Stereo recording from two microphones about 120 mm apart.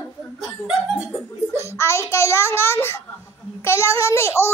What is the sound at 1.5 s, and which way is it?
A child's voice, 20° left (ahead or behind).